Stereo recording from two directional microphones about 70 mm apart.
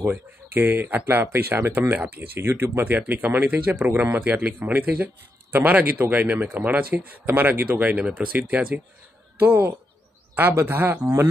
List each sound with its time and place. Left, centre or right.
0.0 s a man's voice: right
9.4 s speech: right